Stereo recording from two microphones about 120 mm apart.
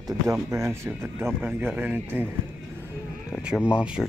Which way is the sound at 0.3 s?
25° right (ahead or behind).